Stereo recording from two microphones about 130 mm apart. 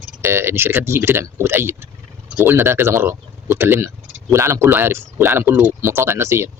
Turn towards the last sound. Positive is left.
turn(degrees=-20)  # may be behind; listen again after turning